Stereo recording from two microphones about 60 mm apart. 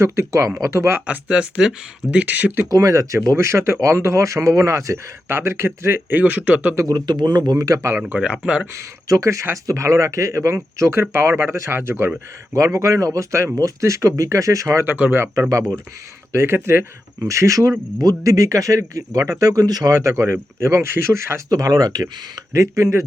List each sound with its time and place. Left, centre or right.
0.0 s speech: right
1.0 s speech: centre
2.6 s speech: right
3.2 s speech: right
5.3 s speech: right
7.5 s speech: right
7.8 s speech: right
8.0 s speech: centre
8.7 s speech: right
12.5 s speech: right
13.6 s speech: right
15.1 s speech: right
17.2 s speech: right
21.5 s speech: right